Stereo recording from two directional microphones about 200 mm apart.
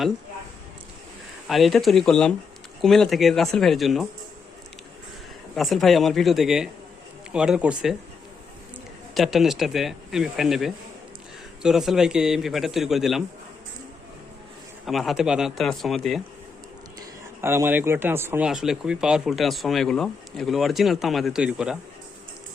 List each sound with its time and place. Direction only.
1.5 s speech: centre (ahead or behind)
5.5 s speech: centre (ahead or behind)
9.1 s speech: centre (ahead or behind)
14.8 s speech: centre (ahead or behind)
17.4 s speech: 10° right (ahead or behind)